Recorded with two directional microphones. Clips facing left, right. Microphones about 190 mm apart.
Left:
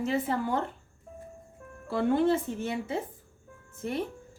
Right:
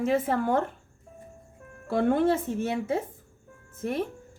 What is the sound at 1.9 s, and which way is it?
Speech, 50° right (ahead or behind).